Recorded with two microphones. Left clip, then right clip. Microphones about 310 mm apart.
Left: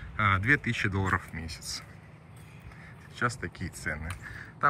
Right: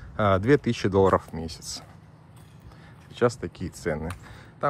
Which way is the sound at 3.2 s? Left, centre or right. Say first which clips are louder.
Right 7 dB; centre.